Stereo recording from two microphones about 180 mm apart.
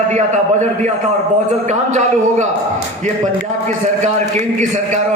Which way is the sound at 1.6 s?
40° right (ahead or behind).